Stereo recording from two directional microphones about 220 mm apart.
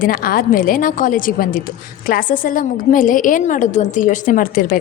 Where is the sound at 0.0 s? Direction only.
40° left (ahead or behind).